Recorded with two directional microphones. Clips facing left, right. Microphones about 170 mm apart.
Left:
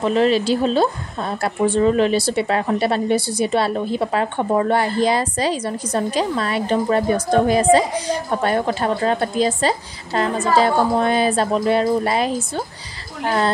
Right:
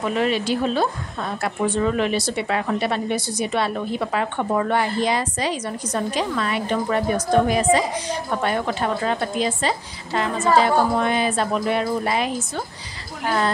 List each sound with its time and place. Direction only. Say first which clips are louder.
0.0 s a woman's voice: left 5 dB; 30° left (ahead or behind)